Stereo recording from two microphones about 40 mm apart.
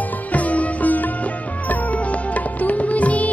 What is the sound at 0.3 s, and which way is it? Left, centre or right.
Music, left.